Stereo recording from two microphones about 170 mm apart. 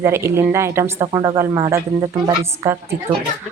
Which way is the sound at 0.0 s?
15° right (ahead or behind).